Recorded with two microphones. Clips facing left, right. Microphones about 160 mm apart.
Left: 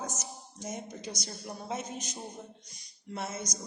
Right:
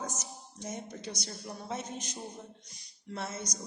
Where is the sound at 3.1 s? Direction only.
20° left (ahead or behind).